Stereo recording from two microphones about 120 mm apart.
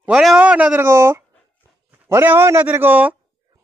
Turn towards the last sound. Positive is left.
turn(degrees=-15)  # may be behind; listen again after turning